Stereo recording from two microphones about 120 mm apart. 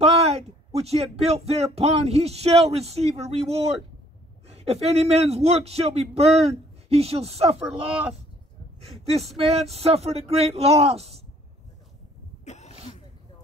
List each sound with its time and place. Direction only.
0.0 s a sound: 60° right (ahead or behind)
0.7 s speech: 60° right (ahead or behind)
7.6 s speech: 10° right (ahead or behind)
9.5 s speech: 60° right (ahead or behind)
12.4 s sneeze: 70° left (ahead or behind)